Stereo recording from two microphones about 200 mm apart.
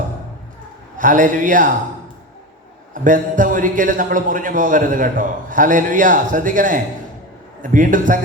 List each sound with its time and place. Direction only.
0.9 s a man's voice: 40° right (ahead or behind)
2.9 s a man's voice: 40° right (ahead or behind)